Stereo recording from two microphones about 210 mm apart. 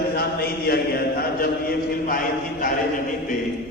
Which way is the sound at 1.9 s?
45° left (ahead or behind).